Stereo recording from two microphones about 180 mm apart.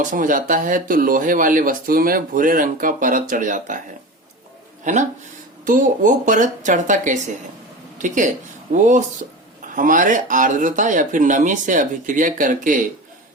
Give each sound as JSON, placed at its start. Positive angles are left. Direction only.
{"t": 0.0, "sound": "speech", "side_deg": -45}
{"t": 4.8, "sound": "speech", "side_deg": -40}